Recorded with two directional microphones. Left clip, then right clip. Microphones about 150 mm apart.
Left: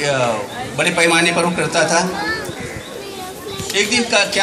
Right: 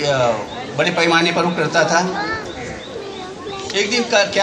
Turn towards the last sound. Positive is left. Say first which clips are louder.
# left 1 dB
turn(degrees=15)  # may be behind; listen again after turning